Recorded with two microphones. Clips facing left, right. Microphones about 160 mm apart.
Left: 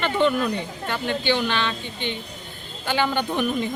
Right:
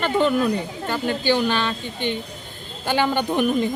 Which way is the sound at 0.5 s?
40° right (ahead or behind).